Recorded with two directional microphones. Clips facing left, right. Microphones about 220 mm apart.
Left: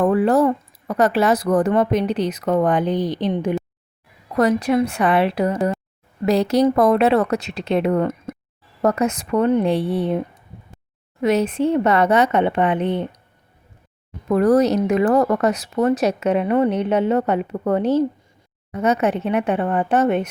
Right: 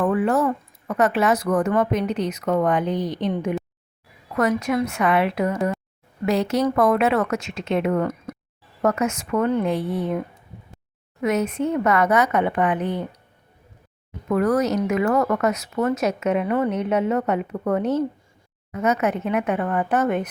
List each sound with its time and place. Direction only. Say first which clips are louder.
0.0 s speech: left 4 dB; 35° left (ahead or behind)
11.2 s speech: left 4 dB; 30° left (ahead or behind)
14.3 s speech: left 5 dB; 35° left (ahead or behind)